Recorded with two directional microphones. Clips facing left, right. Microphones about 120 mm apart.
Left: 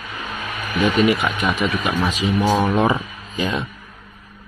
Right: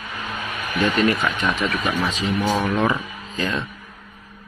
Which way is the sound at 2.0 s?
15° left (ahead or behind).